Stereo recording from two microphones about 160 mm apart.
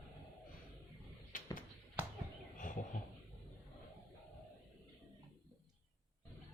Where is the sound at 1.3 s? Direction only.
55° left (ahead or behind).